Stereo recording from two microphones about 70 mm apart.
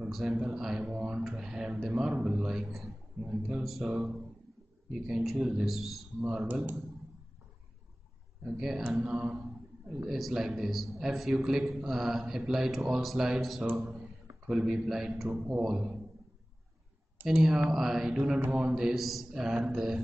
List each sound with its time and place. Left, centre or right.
0.1 s a man's voice: centre
4.9 s a man's voice: centre
6.4 s speech: right
8.5 s a man's voice: centre
8.8 s speech: centre
9.1 s a sound: centre
10.0 s a man's voice: centre
13.7 s speech: centre
14.5 s a man's voice: centre
15.2 s speech: centre
15.5 s a man's voice: centre
17.3 s a man's voice: centre